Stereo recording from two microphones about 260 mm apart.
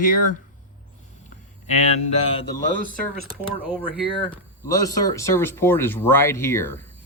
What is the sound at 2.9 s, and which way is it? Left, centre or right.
Speech, right.